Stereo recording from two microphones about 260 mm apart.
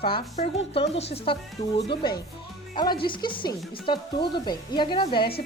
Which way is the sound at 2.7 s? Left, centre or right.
Centre.